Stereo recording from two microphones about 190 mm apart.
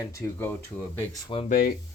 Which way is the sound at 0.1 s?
10° left (ahead or behind).